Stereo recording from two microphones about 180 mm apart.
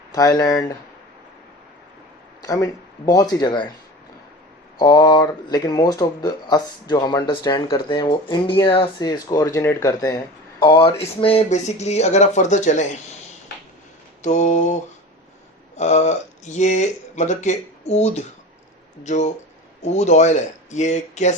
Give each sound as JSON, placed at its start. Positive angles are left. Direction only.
{"t": 0.1, "sound": "speech", "side_deg": 20}
{"t": 2.4, "sound": "speech", "side_deg": 20}
{"t": 4.8, "sound": "speech", "side_deg": 20}
{"t": 14.2, "sound": "speech", "side_deg": 40}
{"t": 15.8, "sound": "speech", "side_deg": 40}